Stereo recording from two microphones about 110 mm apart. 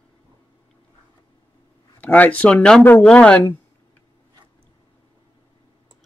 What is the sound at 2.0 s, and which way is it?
Speech, 15° left (ahead or behind).